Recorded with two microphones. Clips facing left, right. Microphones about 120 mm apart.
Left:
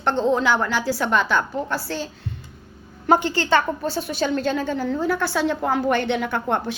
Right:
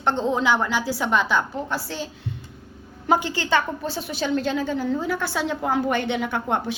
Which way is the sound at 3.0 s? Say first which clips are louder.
Left 3 dB; 10° right (ahead or behind).